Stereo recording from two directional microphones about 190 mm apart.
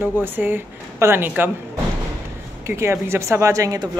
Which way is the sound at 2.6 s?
15° right (ahead or behind).